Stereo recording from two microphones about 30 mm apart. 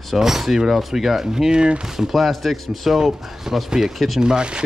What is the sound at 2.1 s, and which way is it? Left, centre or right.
Speech, centre.